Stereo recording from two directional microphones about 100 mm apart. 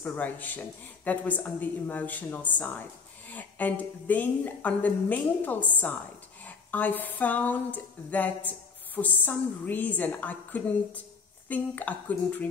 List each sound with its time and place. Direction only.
0.0 s speech: 20° left (ahead or behind)